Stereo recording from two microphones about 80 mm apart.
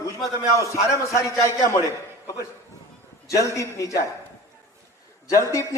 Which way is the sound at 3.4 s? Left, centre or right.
Left.